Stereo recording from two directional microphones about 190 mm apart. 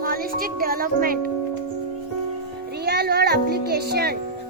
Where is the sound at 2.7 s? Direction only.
60° right (ahead or behind).